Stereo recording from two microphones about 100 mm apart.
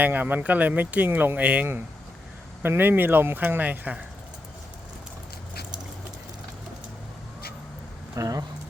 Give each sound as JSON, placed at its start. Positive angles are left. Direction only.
{"t": 0.0, "sound": "speech", "side_deg": -15}
{"t": 8.1, "sound": "speech", "side_deg": -35}